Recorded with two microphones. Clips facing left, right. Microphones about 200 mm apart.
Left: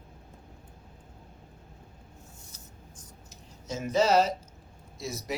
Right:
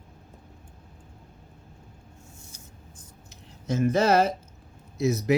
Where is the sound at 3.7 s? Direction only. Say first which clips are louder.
Right 3 dB; 55° right (ahead or behind).